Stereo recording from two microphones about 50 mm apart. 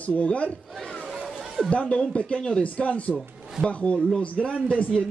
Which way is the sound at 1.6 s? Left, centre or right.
Left.